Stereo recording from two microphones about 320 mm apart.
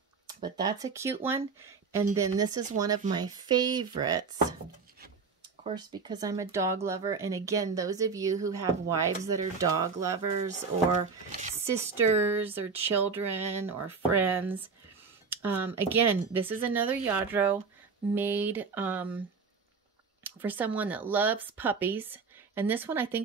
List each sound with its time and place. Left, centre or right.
0.3 s speech: centre
5.6 s speech: centre
11.6 s speech: centre
20.2 s speech: centre